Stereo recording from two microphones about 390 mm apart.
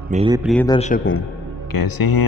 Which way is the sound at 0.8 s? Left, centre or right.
Centre.